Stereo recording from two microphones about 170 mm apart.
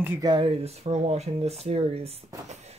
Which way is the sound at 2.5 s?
40° right (ahead or behind).